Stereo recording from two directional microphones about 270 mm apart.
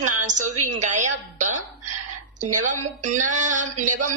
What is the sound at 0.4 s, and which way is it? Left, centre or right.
Speech, right.